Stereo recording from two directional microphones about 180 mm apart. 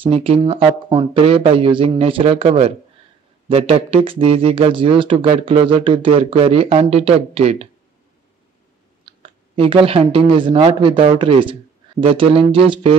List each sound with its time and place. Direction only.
0.0 s speech: 30° right (ahead or behind)
9.0 s speech: 30° right (ahead or behind)